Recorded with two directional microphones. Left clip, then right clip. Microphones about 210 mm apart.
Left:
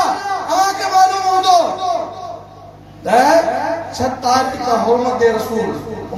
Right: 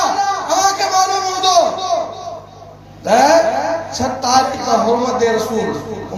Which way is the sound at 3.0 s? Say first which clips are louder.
Right 1 dB; 30° right (ahead or behind).